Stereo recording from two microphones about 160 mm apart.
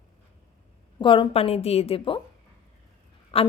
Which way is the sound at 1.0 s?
30° left (ahead or behind).